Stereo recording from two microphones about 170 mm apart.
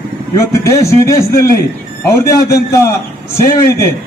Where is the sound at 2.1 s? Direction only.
15° left (ahead or behind).